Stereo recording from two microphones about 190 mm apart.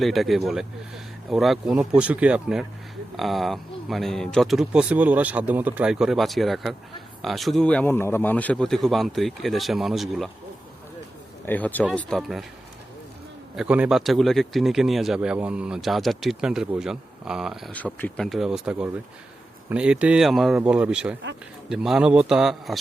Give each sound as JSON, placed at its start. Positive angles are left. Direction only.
{"t": 0.0, "sound": "speech", "side_deg": 0}
{"t": 11.4, "sound": "speech", "side_deg": 10}
{"t": 13.6, "sound": "speech", "side_deg": -5}